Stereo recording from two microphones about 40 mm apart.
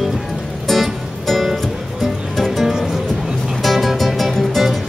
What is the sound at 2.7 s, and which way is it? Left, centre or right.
Music, centre.